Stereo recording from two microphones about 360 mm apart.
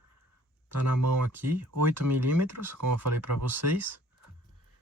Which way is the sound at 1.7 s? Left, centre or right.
Right.